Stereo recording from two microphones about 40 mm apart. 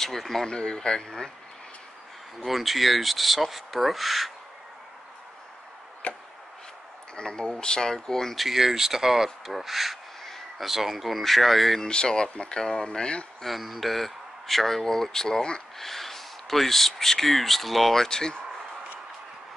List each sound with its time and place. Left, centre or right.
0.0 s speech: centre
0.5 s speech: centre
2.4 s speech: centre
6.0 s chop: left
7.2 s speech: left
8.4 s speech: centre
11.8 s speech: left
13.4 s speech: centre
18.0 s speech: centre